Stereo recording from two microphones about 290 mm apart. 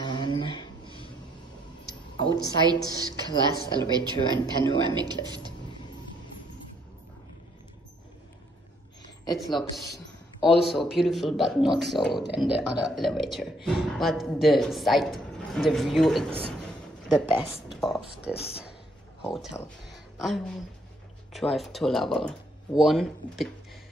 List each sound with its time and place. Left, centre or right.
0.0 s a sound: centre
2.6 s speech: centre
9.6 s a man's voice: centre
10.6 s speech: centre